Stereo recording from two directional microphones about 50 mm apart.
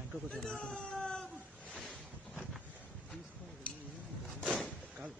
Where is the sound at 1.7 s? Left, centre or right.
Centre.